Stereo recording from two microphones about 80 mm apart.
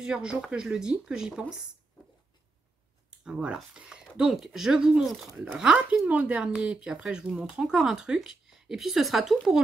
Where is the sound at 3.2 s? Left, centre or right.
Centre.